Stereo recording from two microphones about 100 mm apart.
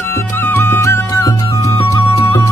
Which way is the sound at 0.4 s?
25° left (ahead or behind).